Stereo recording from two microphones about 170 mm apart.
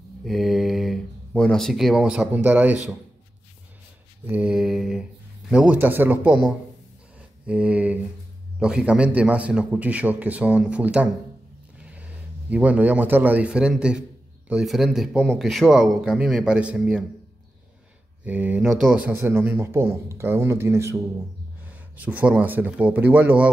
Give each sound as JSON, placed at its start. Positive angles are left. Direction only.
{"t": 0.2, "sound": "speech", "side_deg": 0}
{"t": 4.3, "sound": "a man's voice", "side_deg": -5}
{"t": 18.2, "sound": "speech", "side_deg": -10}